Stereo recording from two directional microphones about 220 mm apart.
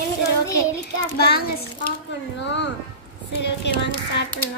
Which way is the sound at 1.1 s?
45° left (ahead or behind).